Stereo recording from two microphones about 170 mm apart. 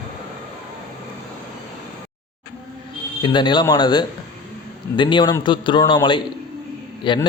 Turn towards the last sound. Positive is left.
turn(degrees=25)  # may be behind; listen again after turning